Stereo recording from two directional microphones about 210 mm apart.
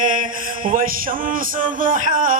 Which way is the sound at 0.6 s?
40° right (ahead or behind).